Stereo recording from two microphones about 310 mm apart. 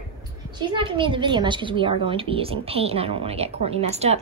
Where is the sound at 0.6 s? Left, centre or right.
Centre.